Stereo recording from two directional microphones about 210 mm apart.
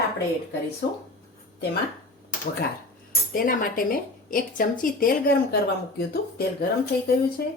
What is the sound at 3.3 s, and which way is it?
A woman's voice, 45° left (ahead or behind).